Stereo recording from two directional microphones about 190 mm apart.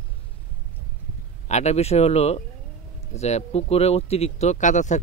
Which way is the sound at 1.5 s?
35° left (ahead or behind).